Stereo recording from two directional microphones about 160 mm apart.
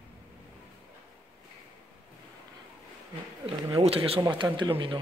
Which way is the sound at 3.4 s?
35° right (ahead or behind).